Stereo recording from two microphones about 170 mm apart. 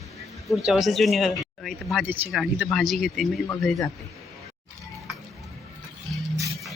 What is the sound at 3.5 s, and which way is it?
Speech, 15° left (ahead or behind).